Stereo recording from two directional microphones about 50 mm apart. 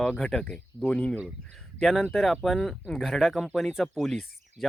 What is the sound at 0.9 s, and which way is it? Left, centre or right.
Speech, left.